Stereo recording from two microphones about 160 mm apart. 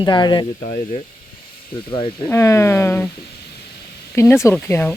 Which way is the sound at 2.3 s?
15° left (ahead or behind).